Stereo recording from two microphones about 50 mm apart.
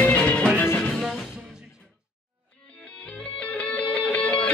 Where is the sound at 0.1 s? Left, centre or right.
Left.